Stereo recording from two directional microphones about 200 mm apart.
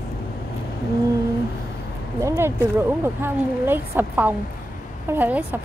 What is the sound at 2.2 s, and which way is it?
Speech, 10° right (ahead or behind).